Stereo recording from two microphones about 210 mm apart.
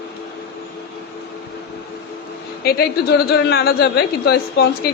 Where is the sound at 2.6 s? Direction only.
45° left (ahead or behind).